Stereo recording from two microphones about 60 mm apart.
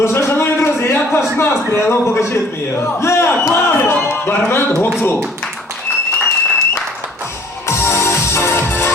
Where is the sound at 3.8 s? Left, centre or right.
Left.